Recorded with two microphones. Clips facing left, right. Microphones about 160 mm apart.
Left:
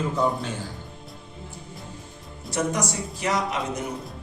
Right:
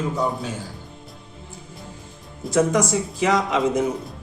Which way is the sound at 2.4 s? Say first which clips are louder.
Right 7 dB; 90° right.